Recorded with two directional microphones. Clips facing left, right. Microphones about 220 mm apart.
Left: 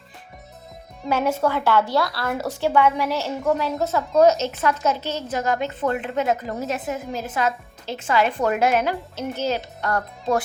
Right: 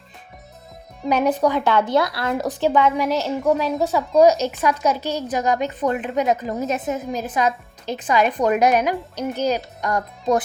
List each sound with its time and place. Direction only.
1.0 s a woman's voice: 15° right (ahead or behind)